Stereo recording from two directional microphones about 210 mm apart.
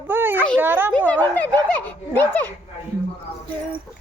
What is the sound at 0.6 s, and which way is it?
Speech, 10° right (ahead or behind).